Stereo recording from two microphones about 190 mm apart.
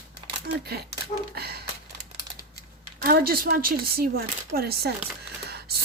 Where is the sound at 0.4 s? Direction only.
55° right (ahead or behind).